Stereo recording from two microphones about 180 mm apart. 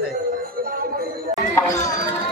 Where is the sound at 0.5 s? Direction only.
55° right (ahead or behind).